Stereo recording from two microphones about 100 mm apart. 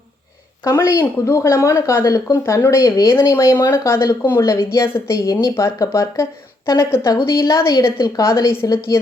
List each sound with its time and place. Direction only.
0.6 s speech: 30° left (ahead or behind)
2.0 s a woman's voice: 40° left (ahead or behind)
2.3 s a woman's voice: 30° left (ahead or behind)